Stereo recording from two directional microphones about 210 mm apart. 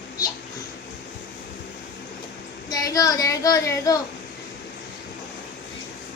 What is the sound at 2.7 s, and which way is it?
Speech, 15° left (ahead or behind).